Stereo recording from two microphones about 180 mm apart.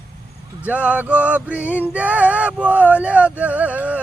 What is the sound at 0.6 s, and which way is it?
Speech, 5° right (ahead or behind).